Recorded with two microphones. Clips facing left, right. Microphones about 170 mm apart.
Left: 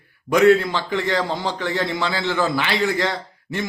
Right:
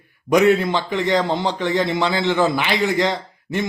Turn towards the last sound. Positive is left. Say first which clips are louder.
# right 3 dB
turn(degrees=-20)  # may be behind; listen again after turning